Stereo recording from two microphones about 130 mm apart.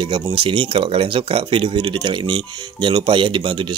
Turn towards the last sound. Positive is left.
turn(degrees=-40)  # may be behind; listen again after turning